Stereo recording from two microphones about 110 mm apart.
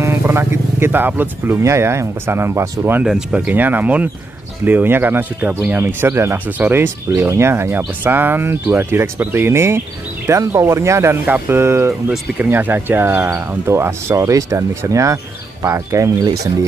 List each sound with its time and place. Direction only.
0.0 s speech: 25° right (ahead or behind)
3.0 s speech: 5° right (ahead or behind); by 16.3 s 30° right (ahead or behind)